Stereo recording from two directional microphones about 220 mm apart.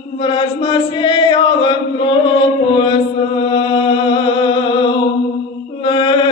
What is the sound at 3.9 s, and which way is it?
Music, 20° left (ahead or behind).